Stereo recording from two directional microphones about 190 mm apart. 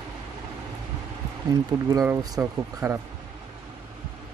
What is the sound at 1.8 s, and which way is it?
Speech, 15° right (ahead or behind).